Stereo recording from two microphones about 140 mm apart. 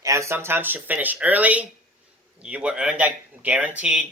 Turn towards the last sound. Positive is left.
turn(degrees=-10)  # may be behind; listen again after turning